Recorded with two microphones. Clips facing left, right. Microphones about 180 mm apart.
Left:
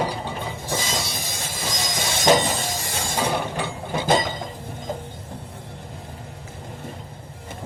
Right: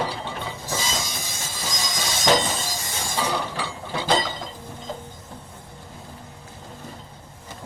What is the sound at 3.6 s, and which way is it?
Chink, 50° left (ahead or behind).